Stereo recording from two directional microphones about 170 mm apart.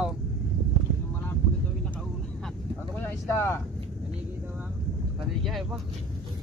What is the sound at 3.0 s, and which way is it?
Speech, 15° left (ahead or behind).